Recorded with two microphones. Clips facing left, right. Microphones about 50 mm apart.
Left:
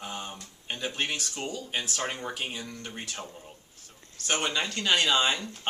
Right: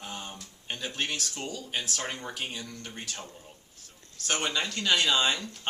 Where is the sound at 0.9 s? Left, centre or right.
Centre.